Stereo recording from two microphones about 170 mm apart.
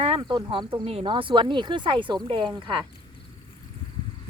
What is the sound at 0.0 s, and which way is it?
Speech, 30° right (ahead or behind).